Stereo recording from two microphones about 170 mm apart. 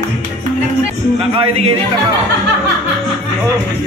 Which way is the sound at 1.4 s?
30° right (ahead or behind).